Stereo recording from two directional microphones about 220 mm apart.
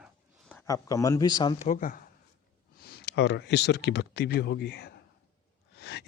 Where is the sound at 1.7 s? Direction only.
40° left (ahead or behind).